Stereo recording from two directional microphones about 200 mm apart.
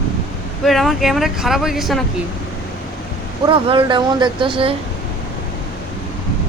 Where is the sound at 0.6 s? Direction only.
Centre (ahead or behind).